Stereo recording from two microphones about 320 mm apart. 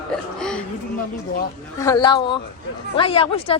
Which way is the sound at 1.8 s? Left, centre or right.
Centre.